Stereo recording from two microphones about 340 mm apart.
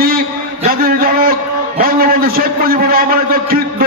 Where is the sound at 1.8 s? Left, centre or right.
Right.